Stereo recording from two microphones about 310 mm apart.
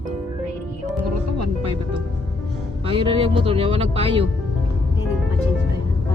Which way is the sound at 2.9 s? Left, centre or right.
Centre.